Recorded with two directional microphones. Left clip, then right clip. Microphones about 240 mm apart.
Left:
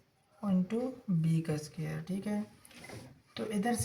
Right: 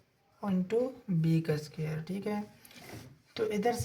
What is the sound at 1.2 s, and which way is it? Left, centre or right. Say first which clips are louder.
Speech: right 6 dB; right.